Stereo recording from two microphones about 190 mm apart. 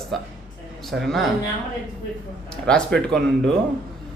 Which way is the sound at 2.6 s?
5° left (ahead or behind).